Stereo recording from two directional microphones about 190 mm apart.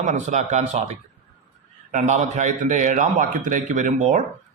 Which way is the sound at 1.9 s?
40° right (ahead or behind).